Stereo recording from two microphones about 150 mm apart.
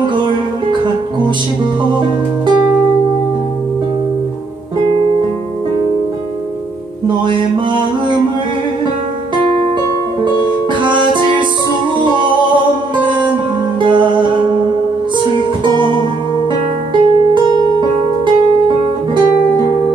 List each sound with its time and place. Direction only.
0.0 s music: 30° right (ahead or behind)
4.8 s music: 35° right (ahead or behind)
10.8 s music: 30° right (ahead or behind)
13.0 s music: 30° right (ahead or behind)
15.6 s music: 30° right (ahead or behind)